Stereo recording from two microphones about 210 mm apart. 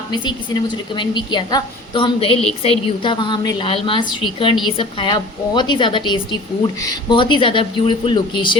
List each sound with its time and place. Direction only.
0.1 s a woman's voice: 20° left (ahead or behind)